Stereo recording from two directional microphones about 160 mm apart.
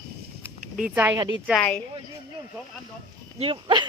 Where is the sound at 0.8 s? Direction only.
10° right (ahead or behind).